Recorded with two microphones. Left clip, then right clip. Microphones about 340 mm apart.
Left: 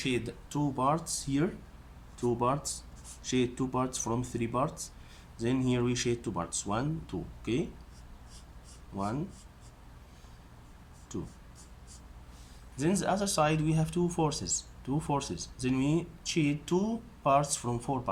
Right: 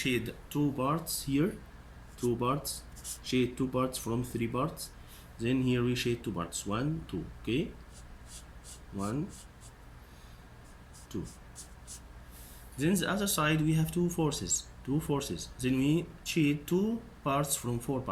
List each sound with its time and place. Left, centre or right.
0.0 s speech: centre
11.1 s speech: centre
12.7 s speech: centre